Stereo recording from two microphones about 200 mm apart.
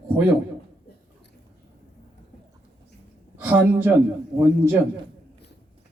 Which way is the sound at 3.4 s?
10° right (ahead or behind).